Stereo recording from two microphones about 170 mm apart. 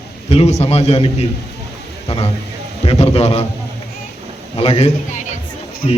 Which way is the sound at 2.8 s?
35° left (ahead or behind).